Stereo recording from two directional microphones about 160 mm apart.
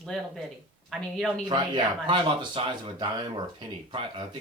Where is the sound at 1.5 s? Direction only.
30° right (ahead or behind).